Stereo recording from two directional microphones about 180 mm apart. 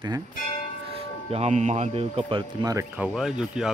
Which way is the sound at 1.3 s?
40° right (ahead or behind).